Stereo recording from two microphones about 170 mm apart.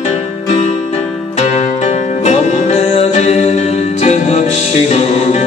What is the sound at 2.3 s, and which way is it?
Music, 40° left (ahead or behind).